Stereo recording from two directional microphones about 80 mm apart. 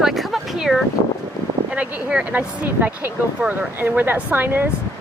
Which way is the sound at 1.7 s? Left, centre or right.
Centre.